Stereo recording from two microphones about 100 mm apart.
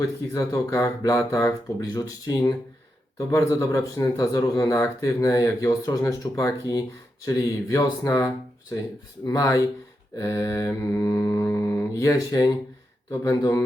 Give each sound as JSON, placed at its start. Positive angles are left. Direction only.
{"t": 0.3, "sound": "speech", "side_deg": 30}